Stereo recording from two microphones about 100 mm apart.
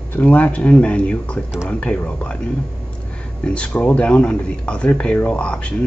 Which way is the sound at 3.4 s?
10° left (ahead or behind).